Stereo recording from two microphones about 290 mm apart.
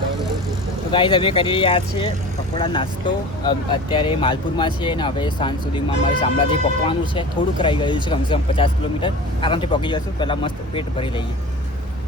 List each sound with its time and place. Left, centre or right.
0.9 s speech: centre